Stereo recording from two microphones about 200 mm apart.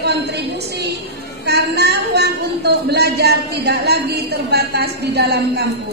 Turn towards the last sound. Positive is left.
turn(degrees=-55)  # may be behind; listen again after turning